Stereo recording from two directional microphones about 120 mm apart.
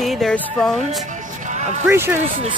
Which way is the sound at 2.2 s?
65° right (ahead or behind).